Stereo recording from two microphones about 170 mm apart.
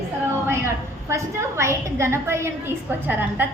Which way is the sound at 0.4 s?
15° right (ahead or behind).